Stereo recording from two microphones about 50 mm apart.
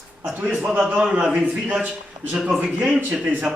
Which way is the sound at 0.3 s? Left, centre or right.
Right.